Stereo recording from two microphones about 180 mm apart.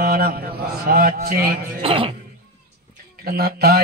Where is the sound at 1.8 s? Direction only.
30° right (ahead or behind).